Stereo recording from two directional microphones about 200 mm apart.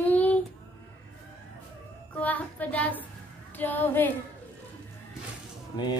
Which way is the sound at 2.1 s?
10° left (ahead or behind).